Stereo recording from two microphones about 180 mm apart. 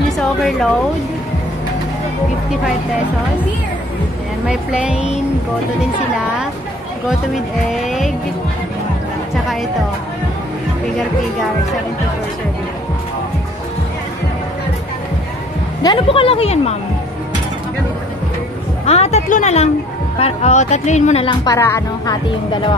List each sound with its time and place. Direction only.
0.4 s a woman's voice: centre (ahead or behind)
4.5 s speech: 5° right (ahead or behind)
7.7 s speech: centre (ahead or behind)
15.8 s speech: 25° left (ahead or behind)
18.9 s speech: 35° left (ahead or behind)
21.3 s speech: 20° left (ahead or behind)